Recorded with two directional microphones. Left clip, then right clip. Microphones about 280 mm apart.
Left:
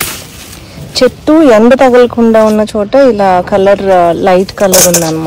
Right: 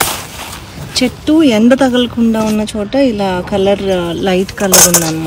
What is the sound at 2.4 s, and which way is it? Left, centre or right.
Speech, centre.